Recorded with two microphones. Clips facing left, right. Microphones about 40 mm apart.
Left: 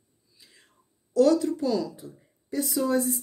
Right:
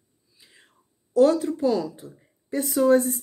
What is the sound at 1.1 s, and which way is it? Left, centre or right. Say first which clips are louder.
Speech: right 2 dB; right.